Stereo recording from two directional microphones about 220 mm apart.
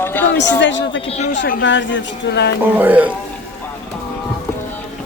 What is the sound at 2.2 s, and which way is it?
Speech, 50° left (ahead or behind).